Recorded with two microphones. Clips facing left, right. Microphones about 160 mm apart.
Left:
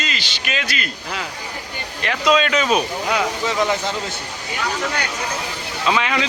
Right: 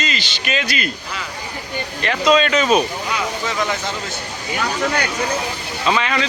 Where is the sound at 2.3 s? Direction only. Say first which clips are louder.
Right 2 dB; 5° left (ahead or behind).